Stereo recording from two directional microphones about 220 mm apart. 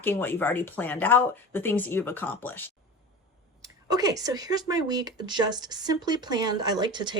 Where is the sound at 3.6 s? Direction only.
15° right (ahead or behind).